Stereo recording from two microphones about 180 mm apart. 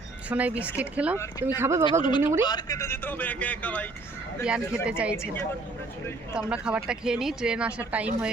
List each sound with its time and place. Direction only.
0.3 s speech: 10° right (ahead or behind)
1.2 s speech: 20° left (ahead or behind)
1.5 s speech: 15° right (ahead or behind)
1.9 s speech: 25° left (ahead or behind); by 3.8 s 10° left (ahead or behind)
4.4 s speech: 5° right (ahead or behind)
5.1 s speech: 15° left (ahead or behind)
6.3 s speech: 5° right (ahead or behind)